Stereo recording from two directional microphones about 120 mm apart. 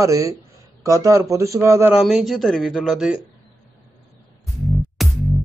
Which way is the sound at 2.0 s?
Centre (ahead or behind).